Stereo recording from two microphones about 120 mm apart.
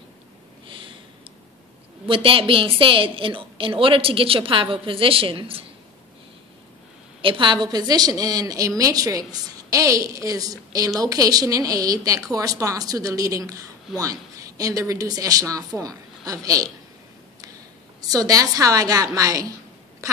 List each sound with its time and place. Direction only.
0.7 s a sound: 45° right (ahead or behind)
2.0 s a woman's voice: 50° right (ahead or behind)
7.2 s a woman's voice: 45° right (ahead or behind); by 16.7 s 30° right (ahead or behind)
18.0 s a woman's voice: 30° right (ahead or behind)